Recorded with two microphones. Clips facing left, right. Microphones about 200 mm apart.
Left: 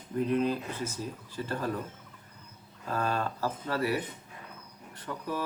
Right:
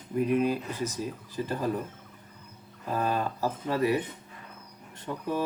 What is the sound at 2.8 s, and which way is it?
Speech, 15° right (ahead or behind).